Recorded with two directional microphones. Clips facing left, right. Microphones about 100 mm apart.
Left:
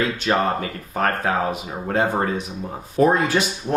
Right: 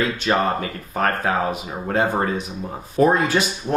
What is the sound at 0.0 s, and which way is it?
Speech, 15° right (ahead or behind).